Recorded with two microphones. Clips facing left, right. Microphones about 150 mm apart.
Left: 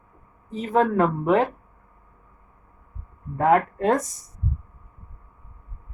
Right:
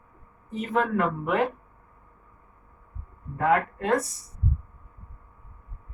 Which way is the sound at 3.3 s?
35° left (ahead or behind).